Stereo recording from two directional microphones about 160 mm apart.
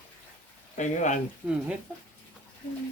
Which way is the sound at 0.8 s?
50° left (ahead or behind).